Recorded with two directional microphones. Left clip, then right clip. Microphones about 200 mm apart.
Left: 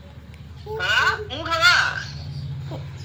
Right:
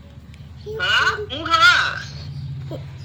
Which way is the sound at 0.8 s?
Centre (ahead or behind).